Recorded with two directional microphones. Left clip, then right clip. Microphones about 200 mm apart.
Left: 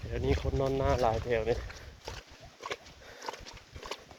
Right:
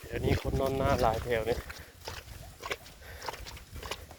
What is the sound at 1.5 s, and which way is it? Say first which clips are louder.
Pig: right 1 dB; 55° right (ahead or behind).